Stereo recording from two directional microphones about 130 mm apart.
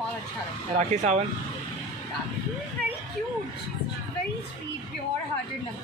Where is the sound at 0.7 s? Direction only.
60° right (ahead or behind).